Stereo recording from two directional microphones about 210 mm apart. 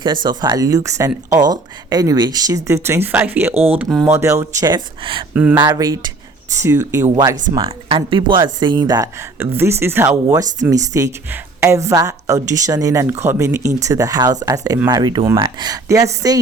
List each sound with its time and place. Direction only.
0.0 s speech: 20° right (ahead or behind)
3.5 s speech: 30° right (ahead or behind)
3.8 s speech: 5° right (ahead or behind)
4.1 s speech: 15° right (ahead or behind)
5.3 s speech: 5° right (ahead or behind)
5.5 s speech: 20° right (ahead or behind)